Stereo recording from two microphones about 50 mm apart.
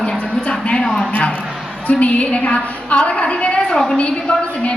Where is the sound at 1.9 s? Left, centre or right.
Left.